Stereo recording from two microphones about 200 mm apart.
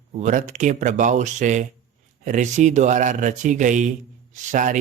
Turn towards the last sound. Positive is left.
turn(degrees=-40)  # may be behind; listen again after turning